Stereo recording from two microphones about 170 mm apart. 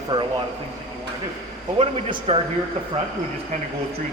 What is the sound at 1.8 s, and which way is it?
Speech, 35° right (ahead or behind).